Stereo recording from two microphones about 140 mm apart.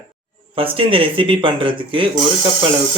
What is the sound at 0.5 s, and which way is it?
Speech, 40° right (ahead or behind).